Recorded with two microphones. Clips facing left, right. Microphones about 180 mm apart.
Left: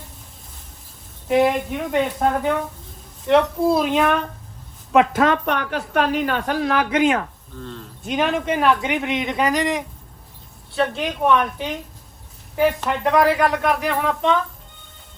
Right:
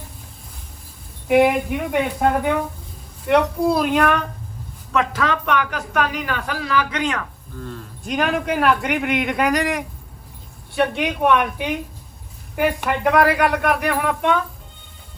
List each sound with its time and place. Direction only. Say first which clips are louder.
1.3 s speech: right 2 dB; 5° right (ahead or behind)
5.1 s a man's voice: left 2 dB; 40° left (ahead or behind)
7.6 s speech: right 1 dB; 5° right (ahead or behind)
11.0 s speech: even; 5° right (ahead or behind)